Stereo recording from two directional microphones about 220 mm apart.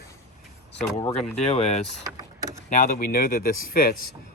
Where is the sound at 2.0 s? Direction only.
15° right (ahead or behind).